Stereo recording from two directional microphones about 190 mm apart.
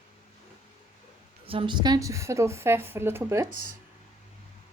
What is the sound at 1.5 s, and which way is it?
A woman's voice, 25° right (ahead or behind).